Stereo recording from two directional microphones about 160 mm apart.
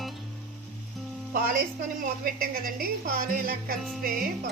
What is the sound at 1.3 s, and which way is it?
A woman's voice, 65° right (ahead or behind).